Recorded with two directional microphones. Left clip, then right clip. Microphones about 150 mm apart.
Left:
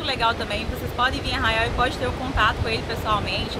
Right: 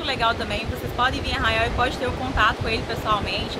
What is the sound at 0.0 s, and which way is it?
Speech, 20° left (ahead or behind).